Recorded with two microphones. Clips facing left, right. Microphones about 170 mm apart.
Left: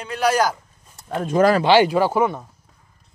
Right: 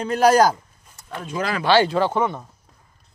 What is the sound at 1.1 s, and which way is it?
Speech, 45° left (ahead or behind).